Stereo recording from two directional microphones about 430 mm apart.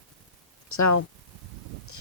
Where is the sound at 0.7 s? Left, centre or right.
Left.